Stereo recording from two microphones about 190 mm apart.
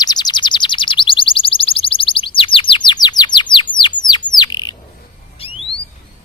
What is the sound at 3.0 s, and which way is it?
Bird, 25° left (ahead or behind).